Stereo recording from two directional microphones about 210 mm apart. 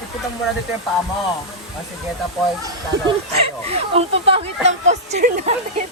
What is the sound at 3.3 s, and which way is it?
Speech, 30° right (ahead or behind).